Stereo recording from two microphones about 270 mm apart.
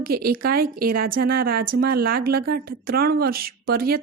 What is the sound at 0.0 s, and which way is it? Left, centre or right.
Speech, right.